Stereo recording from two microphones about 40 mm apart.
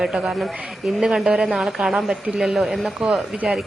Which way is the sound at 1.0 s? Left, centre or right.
Centre.